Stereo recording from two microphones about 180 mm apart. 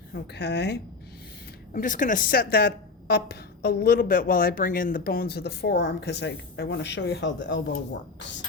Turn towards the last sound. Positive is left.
turn(degrees=85)